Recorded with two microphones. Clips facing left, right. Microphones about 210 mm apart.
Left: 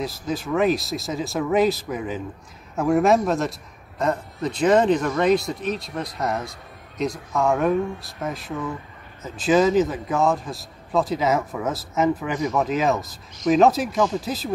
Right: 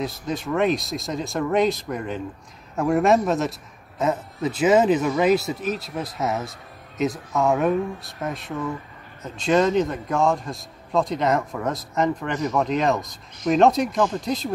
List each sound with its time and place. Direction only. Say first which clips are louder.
0.0 s a man's voice: even; centre (ahead or behind)